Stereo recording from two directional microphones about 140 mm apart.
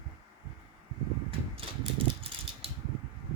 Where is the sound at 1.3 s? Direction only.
40° right (ahead or behind).